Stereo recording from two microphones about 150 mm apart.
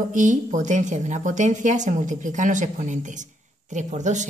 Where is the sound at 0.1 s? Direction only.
55° right (ahead or behind).